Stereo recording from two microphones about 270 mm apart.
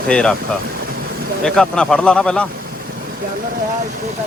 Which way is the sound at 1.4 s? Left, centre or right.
Centre.